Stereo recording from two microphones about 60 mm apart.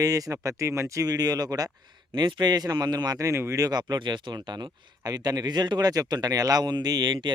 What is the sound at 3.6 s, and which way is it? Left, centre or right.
Speech, right.